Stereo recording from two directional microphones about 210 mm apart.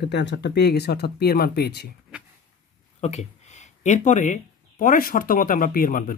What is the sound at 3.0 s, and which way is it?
Speech, 35° left (ahead or behind).